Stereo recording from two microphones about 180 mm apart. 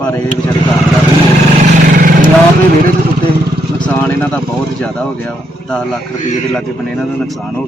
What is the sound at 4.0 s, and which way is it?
Speech, 10° left (ahead or behind).